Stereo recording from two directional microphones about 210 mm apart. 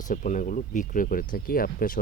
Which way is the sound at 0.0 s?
40° left (ahead or behind).